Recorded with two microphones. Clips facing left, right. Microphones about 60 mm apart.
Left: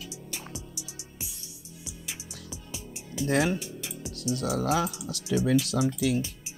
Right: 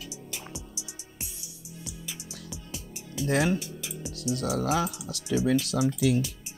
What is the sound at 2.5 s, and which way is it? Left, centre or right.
Music, centre.